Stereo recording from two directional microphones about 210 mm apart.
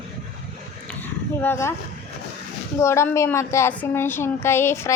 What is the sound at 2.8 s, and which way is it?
A woman's voice, 15° left (ahead or behind).